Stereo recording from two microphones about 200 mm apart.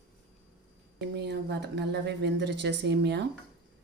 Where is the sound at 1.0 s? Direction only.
55° right (ahead or behind).